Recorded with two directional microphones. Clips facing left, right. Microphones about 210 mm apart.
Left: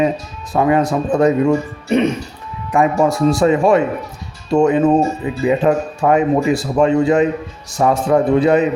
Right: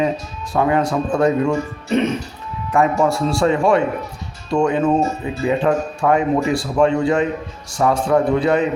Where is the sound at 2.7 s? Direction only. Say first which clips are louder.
Left 2 dB; 15° left (ahead or behind).